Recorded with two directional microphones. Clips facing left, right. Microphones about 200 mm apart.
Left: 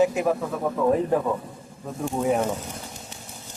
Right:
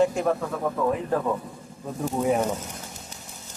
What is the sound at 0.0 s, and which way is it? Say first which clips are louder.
Speech: left 1 dB; 5° left (ahead or behind).